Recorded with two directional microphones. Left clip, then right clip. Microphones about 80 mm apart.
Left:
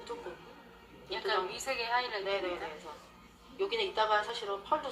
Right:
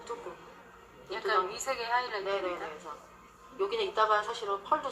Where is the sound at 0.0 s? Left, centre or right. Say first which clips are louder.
Right 2 dB; left.